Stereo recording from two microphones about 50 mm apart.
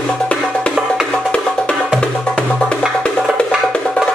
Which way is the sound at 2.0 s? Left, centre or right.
Centre.